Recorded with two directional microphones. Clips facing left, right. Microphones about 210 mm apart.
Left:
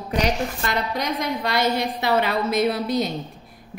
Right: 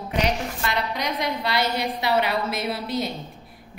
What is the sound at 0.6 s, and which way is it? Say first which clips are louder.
A woman's voice: even; 45° left (ahead or behind).